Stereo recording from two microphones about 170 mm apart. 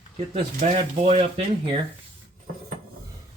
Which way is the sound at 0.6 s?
40° right (ahead or behind).